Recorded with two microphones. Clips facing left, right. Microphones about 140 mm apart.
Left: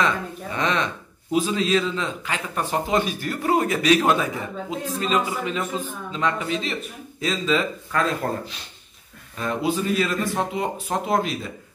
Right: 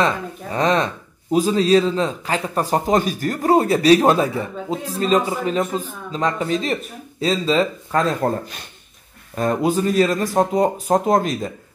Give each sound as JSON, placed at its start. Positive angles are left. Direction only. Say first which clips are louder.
{"t": 0.0, "sound": "a man's voice", "louder": "right 3 dB", "side_deg": -35}
{"t": 9.3, "sound": "a man's voice", "louder": "right 5 dB", "side_deg": -45}